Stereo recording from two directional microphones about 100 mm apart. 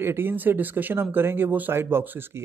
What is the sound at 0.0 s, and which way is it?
Speech, 20° right (ahead or behind).